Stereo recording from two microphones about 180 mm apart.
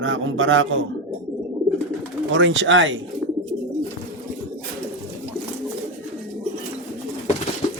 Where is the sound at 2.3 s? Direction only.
90° right.